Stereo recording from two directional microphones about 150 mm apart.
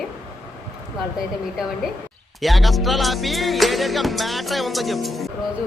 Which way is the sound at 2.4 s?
Centre (ahead or behind).